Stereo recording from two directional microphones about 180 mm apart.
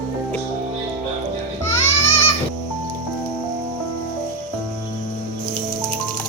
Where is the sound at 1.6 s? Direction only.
15° left (ahead or behind).